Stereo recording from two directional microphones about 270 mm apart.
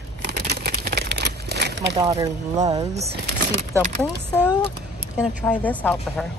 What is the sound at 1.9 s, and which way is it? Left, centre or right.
Speech, centre.